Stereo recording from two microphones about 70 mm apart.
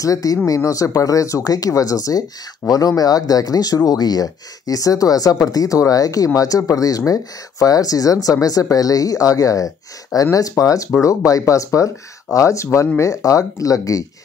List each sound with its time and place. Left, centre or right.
0.0 s speech: left